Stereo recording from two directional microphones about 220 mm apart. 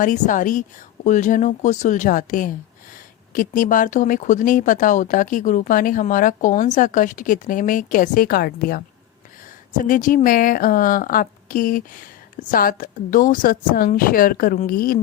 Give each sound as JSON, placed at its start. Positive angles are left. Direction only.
{"t": 0.0, "sound": "speech", "side_deg": 35}